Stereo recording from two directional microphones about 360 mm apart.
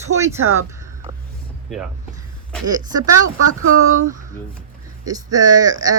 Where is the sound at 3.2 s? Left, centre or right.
Right.